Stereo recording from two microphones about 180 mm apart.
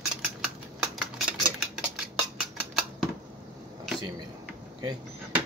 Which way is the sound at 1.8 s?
5° right (ahead or behind).